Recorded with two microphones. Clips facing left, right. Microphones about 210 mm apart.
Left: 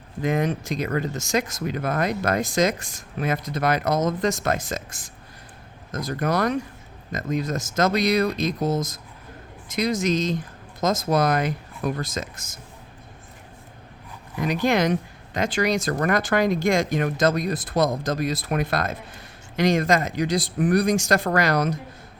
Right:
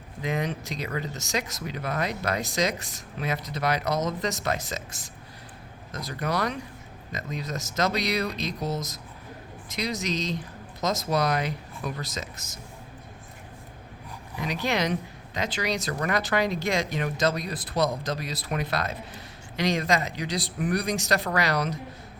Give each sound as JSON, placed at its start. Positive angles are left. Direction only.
{"t": 0.2, "sound": "speech", "side_deg": 50}
{"t": 14.4, "sound": "speech", "side_deg": 50}